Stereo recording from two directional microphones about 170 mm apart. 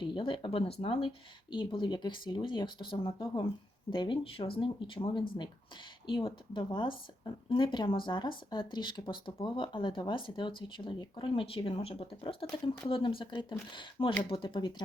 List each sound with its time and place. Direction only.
0.0 s speech: 30° left (ahead or behind)